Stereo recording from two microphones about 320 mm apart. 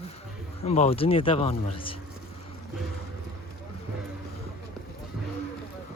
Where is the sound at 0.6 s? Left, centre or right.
Centre.